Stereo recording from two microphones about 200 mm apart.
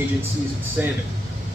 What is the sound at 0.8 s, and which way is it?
Speech, 5° right (ahead or behind).